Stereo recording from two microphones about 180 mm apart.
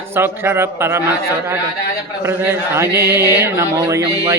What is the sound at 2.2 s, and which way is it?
Speech, 15° right (ahead or behind).